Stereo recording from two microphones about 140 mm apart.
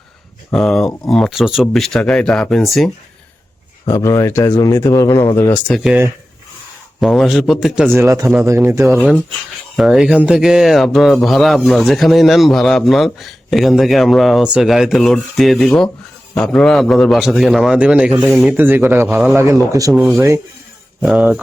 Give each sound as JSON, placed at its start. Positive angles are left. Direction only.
{"t": 0.5, "sound": "speech", "side_deg": 5}
{"t": 3.8, "sound": "speech", "side_deg": 20}
{"t": 7.0, "sound": "speech", "side_deg": 0}
{"t": 7.9, "sound": "speech", "side_deg": -20}
{"t": 9.0, "sound": "speech", "side_deg": 0}
{"t": 18.5, "sound": "speech", "side_deg": -15}
{"t": 19.9, "sound": "speech", "side_deg": -5}
{"t": 20.1, "sound": "speech", "side_deg": -20}
{"t": 21.0, "sound": "speech", "side_deg": -5}